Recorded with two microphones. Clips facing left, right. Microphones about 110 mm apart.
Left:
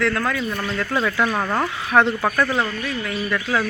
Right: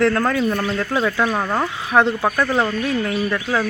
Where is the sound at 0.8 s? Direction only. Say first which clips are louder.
Right 2 dB; 15° right (ahead or behind).